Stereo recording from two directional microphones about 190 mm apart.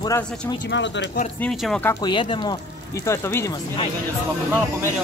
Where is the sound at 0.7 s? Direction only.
70° left (ahead or behind).